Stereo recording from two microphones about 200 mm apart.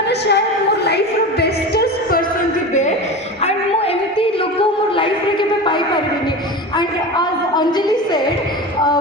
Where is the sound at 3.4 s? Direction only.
30° left (ahead or behind).